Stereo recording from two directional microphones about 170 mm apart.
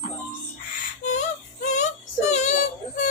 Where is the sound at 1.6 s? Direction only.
45° left (ahead or behind).